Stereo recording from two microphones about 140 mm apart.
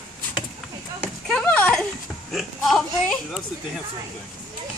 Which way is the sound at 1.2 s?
5° left (ahead or behind).